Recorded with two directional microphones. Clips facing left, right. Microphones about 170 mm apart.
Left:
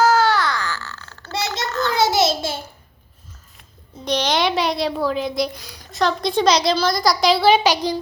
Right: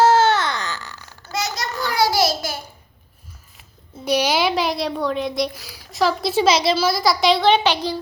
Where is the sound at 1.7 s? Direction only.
10° right (ahead or behind).